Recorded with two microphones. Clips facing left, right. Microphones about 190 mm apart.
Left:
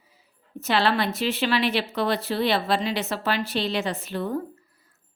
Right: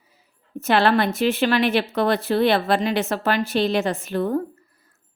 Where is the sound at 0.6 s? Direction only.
50° right (ahead or behind).